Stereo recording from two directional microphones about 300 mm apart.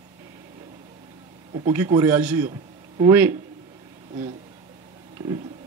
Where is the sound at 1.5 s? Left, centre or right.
Centre.